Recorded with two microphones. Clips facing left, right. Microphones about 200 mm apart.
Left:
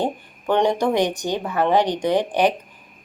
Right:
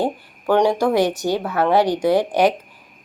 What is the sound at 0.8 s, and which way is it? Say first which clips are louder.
Speech: right 2 dB; 15° left (ahead or behind).